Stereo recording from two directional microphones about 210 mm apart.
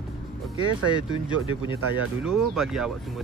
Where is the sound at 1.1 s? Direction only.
25° left (ahead or behind).